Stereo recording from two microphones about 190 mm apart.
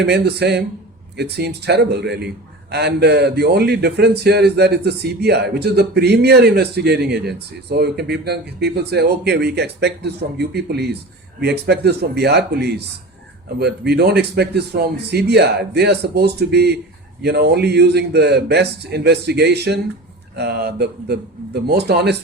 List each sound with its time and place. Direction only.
0.0 s a man's voice: 60° right (ahead or behind)